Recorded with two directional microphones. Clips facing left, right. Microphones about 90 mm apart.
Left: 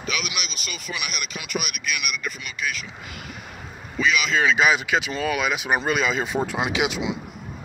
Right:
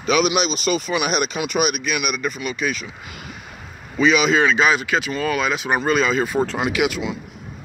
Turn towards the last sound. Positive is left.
turn(degrees=15)  # may be behind; listen again after turning